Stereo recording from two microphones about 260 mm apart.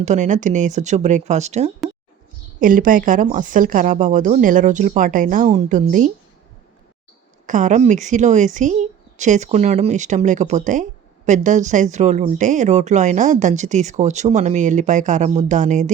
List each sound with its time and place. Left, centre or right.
0.0 s speech: right
7.4 s speech: right